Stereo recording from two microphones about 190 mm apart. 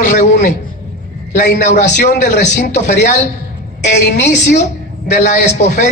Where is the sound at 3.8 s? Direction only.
65° left (ahead or behind).